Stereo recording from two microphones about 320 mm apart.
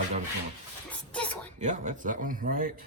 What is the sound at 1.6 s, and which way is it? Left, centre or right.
Speech, right.